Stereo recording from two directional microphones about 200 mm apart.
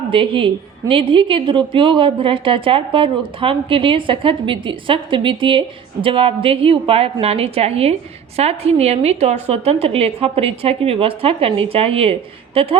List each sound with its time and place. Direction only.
0.1 s a woman's voice: 25° right (ahead or behind)